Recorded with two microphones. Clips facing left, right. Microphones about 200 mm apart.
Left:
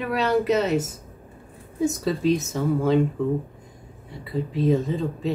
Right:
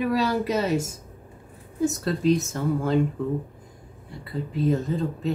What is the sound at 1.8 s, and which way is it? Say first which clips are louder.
Speech: even; centre (ahead or behind).